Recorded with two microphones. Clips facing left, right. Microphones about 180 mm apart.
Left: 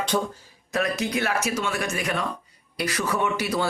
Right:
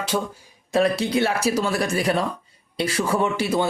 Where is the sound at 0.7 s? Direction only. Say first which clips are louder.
Right 6 dB; 30° right (ahead or behind).